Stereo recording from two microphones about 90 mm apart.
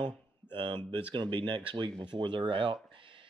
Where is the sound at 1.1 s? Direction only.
60° right (ahead or behind).